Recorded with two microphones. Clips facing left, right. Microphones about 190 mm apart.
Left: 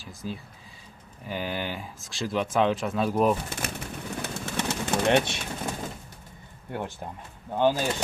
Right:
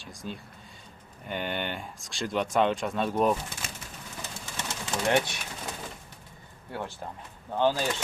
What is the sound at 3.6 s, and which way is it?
Speech, 55° left (ahead or behind).